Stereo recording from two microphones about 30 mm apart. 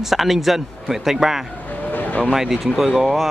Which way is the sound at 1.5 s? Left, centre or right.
Left.